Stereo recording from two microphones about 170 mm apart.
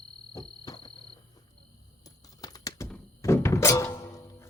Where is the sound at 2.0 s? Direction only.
20° left (ahead or behind).